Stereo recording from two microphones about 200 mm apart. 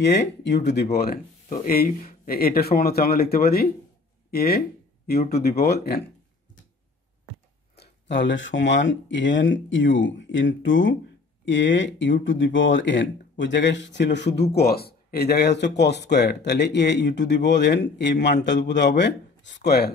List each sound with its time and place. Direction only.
0.0 s speech: 60° left (ahead or behind)
0.9 s speech: 45° left (ahead or behind)
7.7 s speech: 55° left (ahead or behind)